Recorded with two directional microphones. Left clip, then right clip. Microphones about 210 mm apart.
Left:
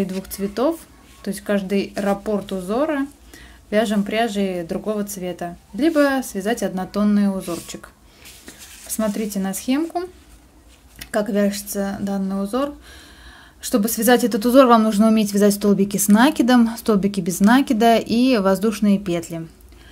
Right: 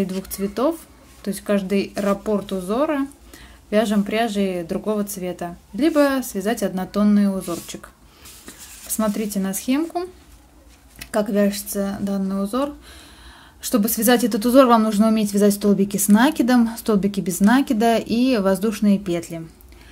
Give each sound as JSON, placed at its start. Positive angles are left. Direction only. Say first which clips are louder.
{"t": 0.0, "sound": "a woman's voice", "louder": "even", "side_deg": 5}